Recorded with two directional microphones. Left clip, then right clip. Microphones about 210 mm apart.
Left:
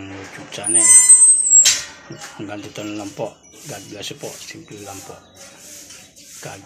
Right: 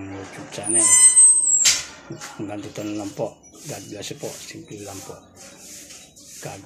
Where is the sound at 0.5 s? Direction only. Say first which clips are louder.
Left 3 dB; 5° right (ahead or behind).